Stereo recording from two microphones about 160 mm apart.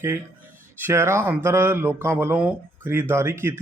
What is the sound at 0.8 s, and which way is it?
Speech, 15° right (ahead or behind).